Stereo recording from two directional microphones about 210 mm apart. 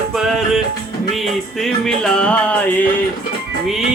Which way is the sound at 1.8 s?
5° left (ahead or behind).